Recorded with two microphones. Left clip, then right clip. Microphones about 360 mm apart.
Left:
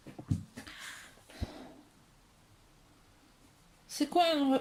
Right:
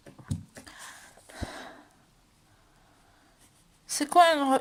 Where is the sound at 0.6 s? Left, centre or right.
Centre.